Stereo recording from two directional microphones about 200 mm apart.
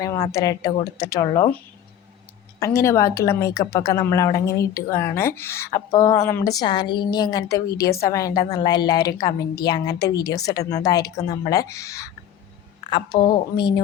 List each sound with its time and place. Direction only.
0.0 s a woman's voice: 15° left (ahead or behind)
2.6 s a woman's voice: 15° left (ahead or behind)